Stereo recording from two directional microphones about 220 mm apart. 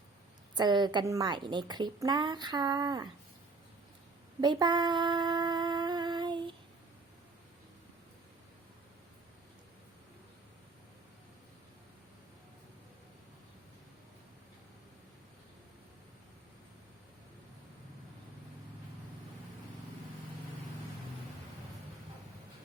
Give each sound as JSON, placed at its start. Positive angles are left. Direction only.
{"t": 0.5, "sound": "a woman's voice", "side_deg": -20}
{"t": 4.4, "sound": "humming", "side_deg": -20}